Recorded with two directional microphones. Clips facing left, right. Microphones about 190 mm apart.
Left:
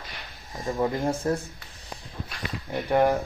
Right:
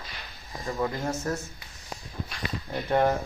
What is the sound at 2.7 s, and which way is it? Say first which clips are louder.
Speech: left 2 dB; 10° left (ahead or behind).